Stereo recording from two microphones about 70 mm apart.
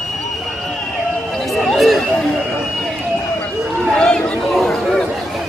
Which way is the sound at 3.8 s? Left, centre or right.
Centre.